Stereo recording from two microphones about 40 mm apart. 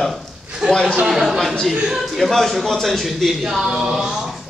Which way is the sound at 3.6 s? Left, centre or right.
Right.